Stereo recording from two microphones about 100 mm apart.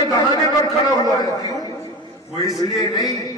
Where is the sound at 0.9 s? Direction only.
40° left (ahead or behind).